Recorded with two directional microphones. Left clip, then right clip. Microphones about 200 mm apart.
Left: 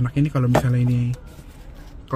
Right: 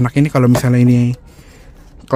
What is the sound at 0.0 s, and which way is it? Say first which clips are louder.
Speech: right 10 dB; 50° right (ahead or behind).